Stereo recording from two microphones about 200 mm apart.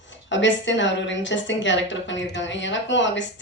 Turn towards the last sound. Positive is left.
turn(degrees=65)  # may be behind; listen again after turning